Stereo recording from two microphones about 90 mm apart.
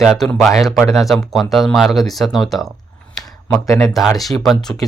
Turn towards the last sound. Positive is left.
turn(degrees=5)  # may be behind; listen again after turning